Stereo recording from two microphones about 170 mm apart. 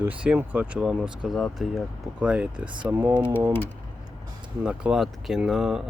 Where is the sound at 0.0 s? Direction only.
10° right (ahead or behind).